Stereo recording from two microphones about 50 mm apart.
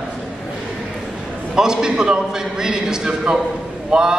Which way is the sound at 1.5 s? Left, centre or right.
Centre.